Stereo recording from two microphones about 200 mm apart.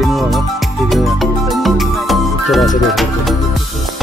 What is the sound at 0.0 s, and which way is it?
Music, centre (ahead or behind).